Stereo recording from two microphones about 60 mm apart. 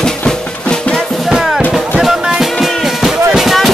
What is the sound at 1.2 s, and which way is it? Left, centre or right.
Music, centre.